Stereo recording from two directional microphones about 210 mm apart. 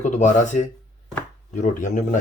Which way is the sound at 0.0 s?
35° left (ahead or behind).